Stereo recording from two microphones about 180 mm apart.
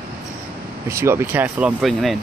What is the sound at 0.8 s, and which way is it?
Speech, 15° right (ahead or behind).